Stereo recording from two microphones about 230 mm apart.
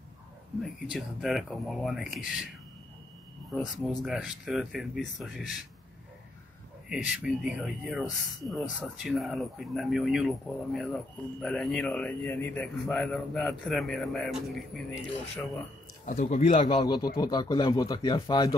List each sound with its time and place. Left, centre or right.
0.6 s a man's voice: centre
3.5 s a man's voice: centre
6.9 s a man's voice: centre
16.1 s speech: left